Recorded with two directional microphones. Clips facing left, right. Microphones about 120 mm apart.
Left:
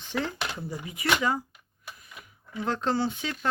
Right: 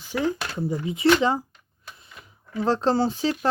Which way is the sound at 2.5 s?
30° right (ahead or behind).